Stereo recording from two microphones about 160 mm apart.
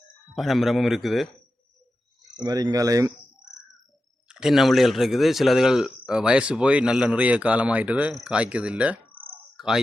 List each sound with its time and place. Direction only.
0.3 s speech: centre (ahead or behind)
2.4 s speech: 25° right (ahead or behind)
4.3 s speech: 5° right (ahead or behind)